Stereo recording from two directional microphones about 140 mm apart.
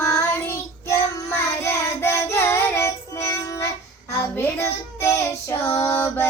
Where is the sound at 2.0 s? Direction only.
20° left (ahead or behind).